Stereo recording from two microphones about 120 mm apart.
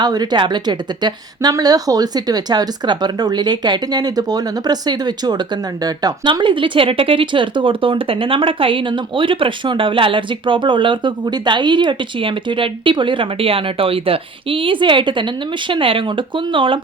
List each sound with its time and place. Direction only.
0.0 s a woman's voice: 35° right (ahead or behind)